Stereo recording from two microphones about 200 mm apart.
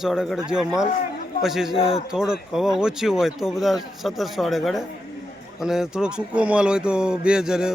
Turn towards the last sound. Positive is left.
turn(degrees=-5)  # may be behind; listen again after turning